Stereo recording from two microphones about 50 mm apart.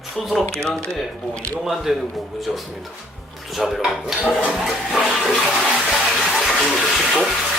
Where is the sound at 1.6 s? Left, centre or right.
Centre.